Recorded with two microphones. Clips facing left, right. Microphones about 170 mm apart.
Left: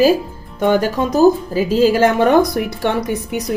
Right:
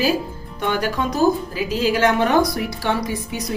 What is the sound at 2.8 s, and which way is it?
Speech, 60° left (ahead or behind).